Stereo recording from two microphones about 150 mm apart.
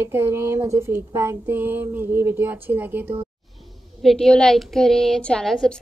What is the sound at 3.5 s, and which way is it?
Speech, centre (ahead or behind).